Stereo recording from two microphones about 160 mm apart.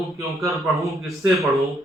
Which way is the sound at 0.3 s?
Centre (ahead or behind).